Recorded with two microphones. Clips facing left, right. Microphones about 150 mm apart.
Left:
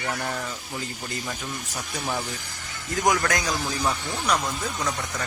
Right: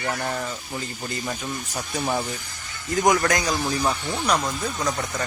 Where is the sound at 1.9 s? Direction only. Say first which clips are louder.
Right 4 dB; 20° right (ahead or behind).